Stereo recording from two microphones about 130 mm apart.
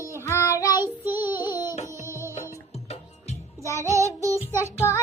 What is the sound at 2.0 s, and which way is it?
Music, 20° right (ahead or behind).